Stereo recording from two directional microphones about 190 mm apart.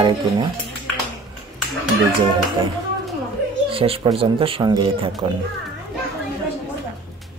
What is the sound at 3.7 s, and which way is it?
Speech, 30° right (ahead or behind).